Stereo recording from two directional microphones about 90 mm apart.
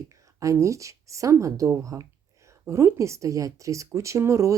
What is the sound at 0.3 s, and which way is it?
A woman's voice, 35° right (ahead or behind).